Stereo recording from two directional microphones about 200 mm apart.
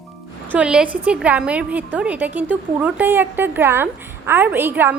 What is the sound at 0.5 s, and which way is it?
A woman's voice, 5° right (ahead or behind).